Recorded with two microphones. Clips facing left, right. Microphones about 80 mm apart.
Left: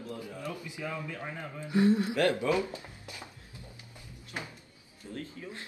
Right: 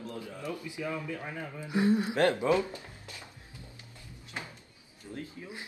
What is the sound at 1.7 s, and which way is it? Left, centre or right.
Speech, centre.